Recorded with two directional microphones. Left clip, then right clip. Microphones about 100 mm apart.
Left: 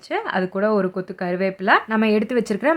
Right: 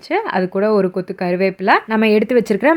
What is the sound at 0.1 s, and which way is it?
Speech, 30° right (ahead or behind).